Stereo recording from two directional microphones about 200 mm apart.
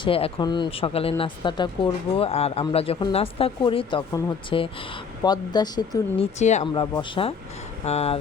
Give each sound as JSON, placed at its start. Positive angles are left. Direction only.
{"t": 0.0, "sound": "speech", "side_deg": 25}